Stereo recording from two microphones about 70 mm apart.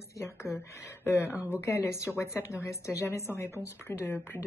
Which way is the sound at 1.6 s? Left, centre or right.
Left.